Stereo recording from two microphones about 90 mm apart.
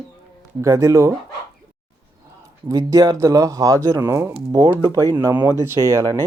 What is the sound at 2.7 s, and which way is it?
Speech, 40° right (ahead or behind).